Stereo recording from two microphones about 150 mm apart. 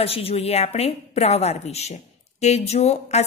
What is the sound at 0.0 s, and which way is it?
A woman's voice, 40° left (ahead or behind).